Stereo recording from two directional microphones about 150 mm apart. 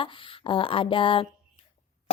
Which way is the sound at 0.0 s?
35° left (ahead or behind).